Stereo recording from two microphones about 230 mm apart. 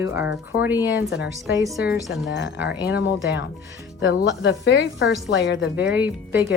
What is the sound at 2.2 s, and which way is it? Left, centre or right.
A woman's voice, left.